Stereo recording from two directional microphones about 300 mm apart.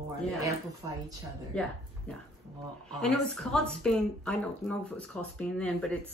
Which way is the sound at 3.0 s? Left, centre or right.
Centre.